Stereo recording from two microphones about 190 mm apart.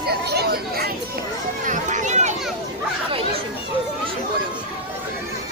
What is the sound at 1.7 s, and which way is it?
Speech, 40° right (ahead or behind).